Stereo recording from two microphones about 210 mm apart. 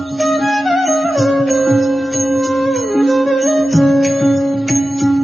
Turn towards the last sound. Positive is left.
turn(degrees=0)  # may be behind; listen again after turning